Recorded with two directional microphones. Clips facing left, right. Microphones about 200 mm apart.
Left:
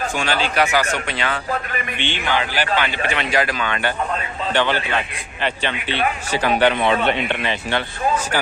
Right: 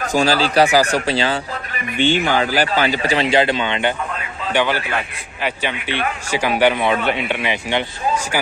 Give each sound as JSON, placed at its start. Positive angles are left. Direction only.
{"t": 0.0, "sound": "a man's voice", "side_deg": -35}
{"t": 2.0, "sound": "a man's voice", "side_deg": -45}
{"t": 4.5, "sound": "a man's voice", "side_deg": -10}